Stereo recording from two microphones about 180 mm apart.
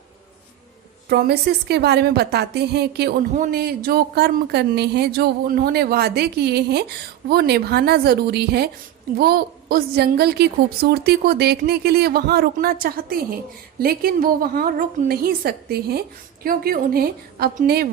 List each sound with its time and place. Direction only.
1.1 s speech: 65° right (ahead or behind)
3.3 s speech: 50° right (ahead or behind)